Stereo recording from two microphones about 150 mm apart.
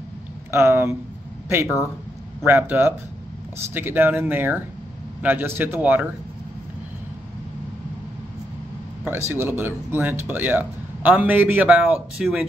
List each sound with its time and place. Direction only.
0.5 s speech: 15° right (ahead or behind)
9.0 s speech: 15° right (ahead or behind)